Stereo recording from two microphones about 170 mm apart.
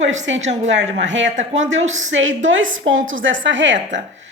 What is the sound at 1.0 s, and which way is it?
A woman's voice, 90° right.